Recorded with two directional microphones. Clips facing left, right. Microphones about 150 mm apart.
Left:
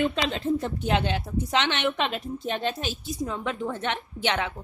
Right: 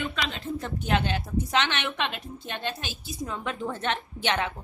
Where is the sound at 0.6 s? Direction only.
20° left (ahead or behind).